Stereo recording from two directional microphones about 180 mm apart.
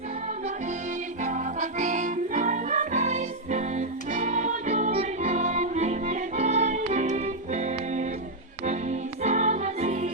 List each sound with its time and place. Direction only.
1.2 s music: 45° right (ahead or behind)